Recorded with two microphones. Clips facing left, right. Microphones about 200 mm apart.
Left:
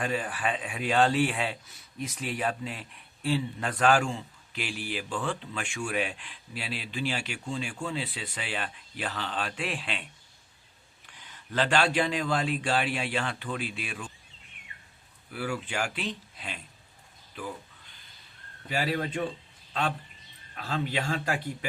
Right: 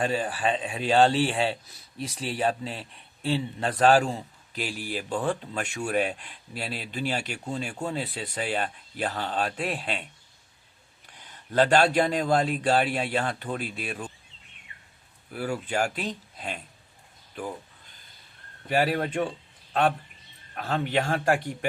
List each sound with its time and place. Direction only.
0.0 s a man's voice: 30° right (ahead or behind)
11.3 s a man's voice: 40° right (ahead or behind)
15.3 s a man's voice: 40° right (ahead or behind)
17.3 s a sound: 45° right (ahead or behind)
18.7 s speech: 50° right (ahead or behind)
20.6 s speech: 50° right (ahead or behind)